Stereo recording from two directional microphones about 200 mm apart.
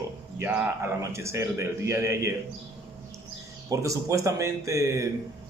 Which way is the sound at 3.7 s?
15° right (ahead or behind).